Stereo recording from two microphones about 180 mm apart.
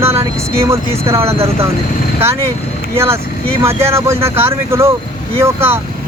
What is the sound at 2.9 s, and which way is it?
Speech, 15° right (ahead or behind).